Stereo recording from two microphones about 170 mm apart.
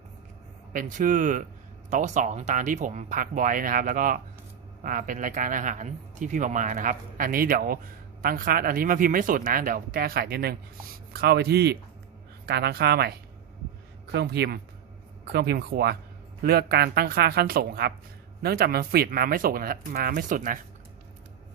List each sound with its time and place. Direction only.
0.7 s speech: 50° right (ahead or behind)